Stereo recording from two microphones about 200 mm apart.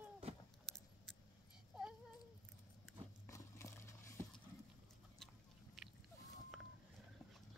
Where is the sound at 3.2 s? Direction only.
15° left (ahead or behind).